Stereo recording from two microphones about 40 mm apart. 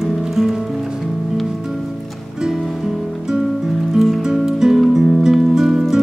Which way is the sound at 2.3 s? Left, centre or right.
Centre.